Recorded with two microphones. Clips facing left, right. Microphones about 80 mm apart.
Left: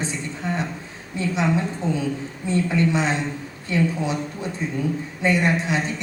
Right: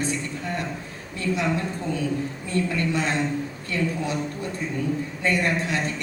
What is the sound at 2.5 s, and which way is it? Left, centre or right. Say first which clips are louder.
A woman's voice: left 5 dB; left.